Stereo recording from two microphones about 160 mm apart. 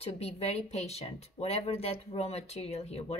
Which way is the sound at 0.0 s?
40° left (ahead or behind).